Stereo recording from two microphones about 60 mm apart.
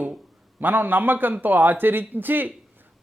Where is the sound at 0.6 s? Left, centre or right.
Right.